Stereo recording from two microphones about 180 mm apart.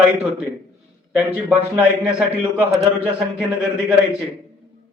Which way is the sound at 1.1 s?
10° right (ahead or behind).